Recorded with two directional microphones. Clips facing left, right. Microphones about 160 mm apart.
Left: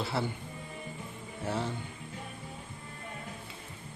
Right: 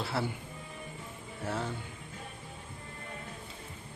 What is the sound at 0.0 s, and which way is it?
Speech, centre (ahead or behind).